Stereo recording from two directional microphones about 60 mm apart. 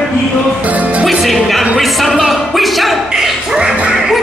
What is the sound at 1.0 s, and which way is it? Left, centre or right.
Speech, centre.